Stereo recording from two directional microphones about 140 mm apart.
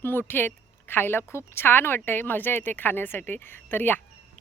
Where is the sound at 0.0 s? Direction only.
15° left (ahead or behind).